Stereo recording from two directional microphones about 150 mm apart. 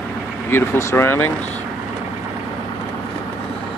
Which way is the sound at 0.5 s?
15° left (ahead or behind).